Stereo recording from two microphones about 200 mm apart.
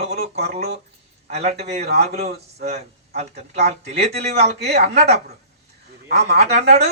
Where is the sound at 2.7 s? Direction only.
30° right (ahead or behind).